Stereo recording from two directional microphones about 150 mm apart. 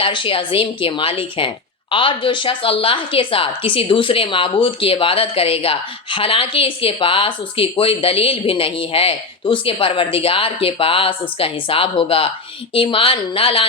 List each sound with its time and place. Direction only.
0.0 s a woman's voice: 35° left (ahead or behind)